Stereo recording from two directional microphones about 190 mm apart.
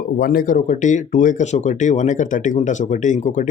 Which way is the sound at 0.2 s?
50° left (ahead or behind).